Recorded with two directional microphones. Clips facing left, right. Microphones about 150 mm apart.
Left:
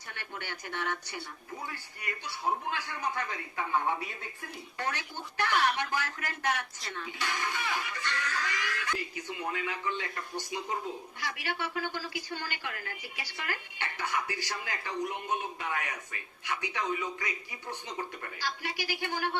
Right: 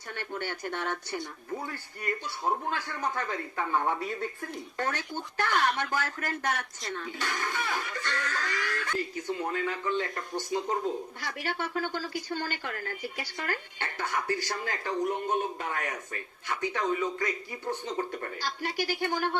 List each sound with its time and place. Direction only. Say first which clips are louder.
0.1 s a woman's voice: right 7 dB; 45° right (ahead or behind)